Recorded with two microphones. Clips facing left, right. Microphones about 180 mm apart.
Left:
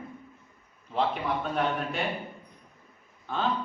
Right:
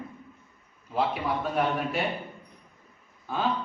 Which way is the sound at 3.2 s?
5° right (ahead or behind).